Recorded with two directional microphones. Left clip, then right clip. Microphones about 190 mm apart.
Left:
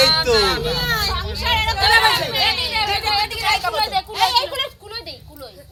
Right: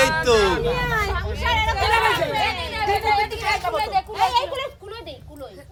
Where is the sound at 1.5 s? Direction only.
10° left (ahead or behind).